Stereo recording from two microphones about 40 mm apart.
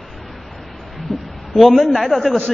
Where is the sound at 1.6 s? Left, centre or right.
Centre.